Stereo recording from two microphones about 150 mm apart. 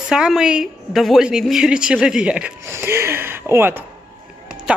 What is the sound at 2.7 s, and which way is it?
Speech, 15° right (ahead or behind).